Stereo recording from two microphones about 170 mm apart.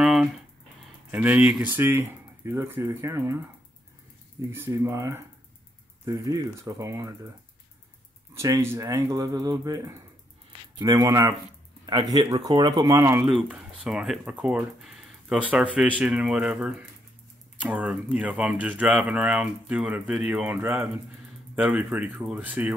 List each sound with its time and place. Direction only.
0.0 s a sound: centre (ahead or behind)
1.1 s speech: 10° right (ahead or behind)
4.5 s speech: 15° right (ahead or behind)
8.4 s speech: 20° right (ahead or behind)
13.3 s speech: 5° right (ahead or behind)